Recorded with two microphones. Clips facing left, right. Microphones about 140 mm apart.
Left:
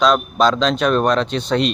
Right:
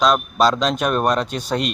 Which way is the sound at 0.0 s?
5° right (ahead or behind).